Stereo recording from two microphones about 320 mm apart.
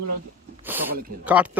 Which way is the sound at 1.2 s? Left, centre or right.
Centre.